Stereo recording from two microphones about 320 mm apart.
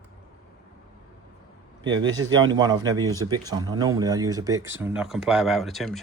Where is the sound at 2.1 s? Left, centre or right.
Centre.